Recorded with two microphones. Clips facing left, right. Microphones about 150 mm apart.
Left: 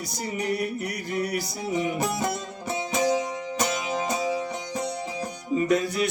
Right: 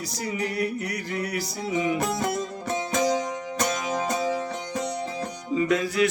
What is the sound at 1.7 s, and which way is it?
Music, centre (ahead or behind).